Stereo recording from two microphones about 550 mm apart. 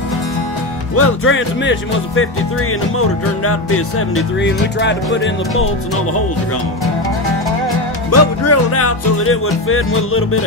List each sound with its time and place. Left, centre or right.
0.9 s music: left
8.1 s music: left